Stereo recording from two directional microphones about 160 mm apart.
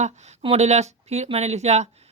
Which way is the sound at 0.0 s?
45° right (ahead or behind).